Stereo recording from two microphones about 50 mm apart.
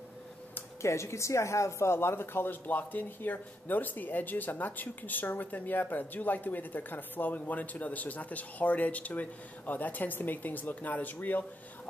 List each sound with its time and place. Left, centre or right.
0.8 s speech: left